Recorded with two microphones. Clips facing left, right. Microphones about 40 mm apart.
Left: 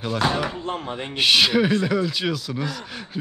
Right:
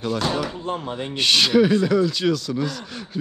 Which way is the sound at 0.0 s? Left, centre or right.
Centre.